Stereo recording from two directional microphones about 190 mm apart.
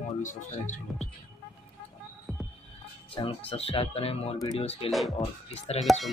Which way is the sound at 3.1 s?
30° left (ahead or behind).